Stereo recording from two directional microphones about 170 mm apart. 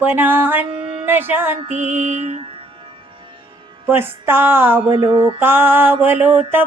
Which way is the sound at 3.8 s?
15° right (ahead or behind).